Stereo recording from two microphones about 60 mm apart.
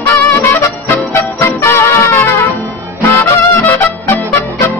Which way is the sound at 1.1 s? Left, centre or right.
Left.